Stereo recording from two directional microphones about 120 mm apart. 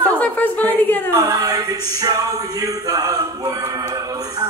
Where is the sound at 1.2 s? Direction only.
30° right (ahead or behind).